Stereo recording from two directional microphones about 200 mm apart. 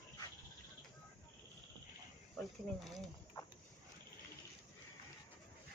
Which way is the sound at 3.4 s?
20° left (ahead or behind).